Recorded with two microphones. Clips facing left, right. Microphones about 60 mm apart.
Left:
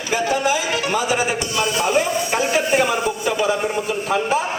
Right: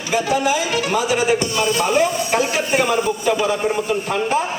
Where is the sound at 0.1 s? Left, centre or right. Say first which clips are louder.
Right 1 dB; centre.